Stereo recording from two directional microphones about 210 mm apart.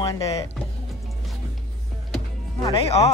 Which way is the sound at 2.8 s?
30° left (ahead or behind).